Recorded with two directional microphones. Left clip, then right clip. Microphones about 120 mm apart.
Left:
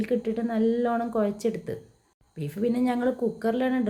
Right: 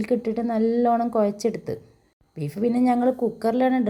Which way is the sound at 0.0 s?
30° right (ahead or behind).